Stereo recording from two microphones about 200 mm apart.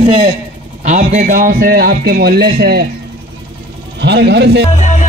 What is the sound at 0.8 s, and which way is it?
A man's voice, 40° right (ahead or behind).